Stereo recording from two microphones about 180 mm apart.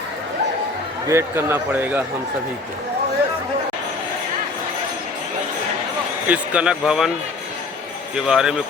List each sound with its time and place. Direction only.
1.0 s speech: 15° right (ahead or behind)
6.2 s a man's voice: 10° right (ahead or behind)
8.1 s a man's voice: 5° right (ahead or behind)